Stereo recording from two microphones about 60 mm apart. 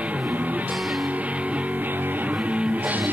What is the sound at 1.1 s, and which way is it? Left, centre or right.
Music, right.